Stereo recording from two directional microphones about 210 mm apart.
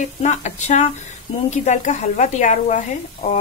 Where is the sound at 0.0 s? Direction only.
35° left (ahead or behind).